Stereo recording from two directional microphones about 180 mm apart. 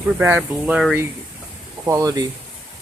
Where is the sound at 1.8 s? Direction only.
20° right (ahead or behind).